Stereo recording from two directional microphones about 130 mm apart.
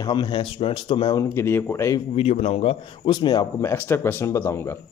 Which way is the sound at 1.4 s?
20° left (ahead or behind).